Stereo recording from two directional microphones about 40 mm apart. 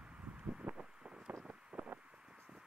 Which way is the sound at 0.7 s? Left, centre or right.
Right.